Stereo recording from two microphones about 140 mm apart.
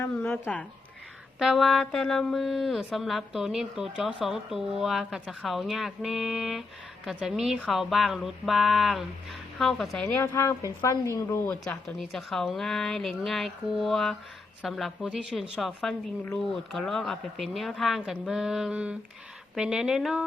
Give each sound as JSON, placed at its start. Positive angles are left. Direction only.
{"t": 0.0, "sound": "speech", "side_deg": 15}
{"t": 1.4, "sound": "a woman's voice", "side_deg": 0}
{"t": 10.2, "sound": "speech", "side_deg": 15}
{"t": 11.6, "sound": "a woman's voice", "side_deg": 5}